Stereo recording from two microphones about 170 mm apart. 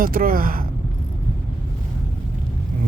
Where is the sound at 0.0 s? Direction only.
55° right (ahead or behind).